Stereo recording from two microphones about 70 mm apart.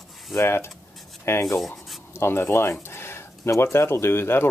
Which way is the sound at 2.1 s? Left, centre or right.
Left.